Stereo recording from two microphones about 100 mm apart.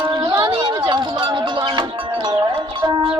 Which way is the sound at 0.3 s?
55° right (ahead or behind).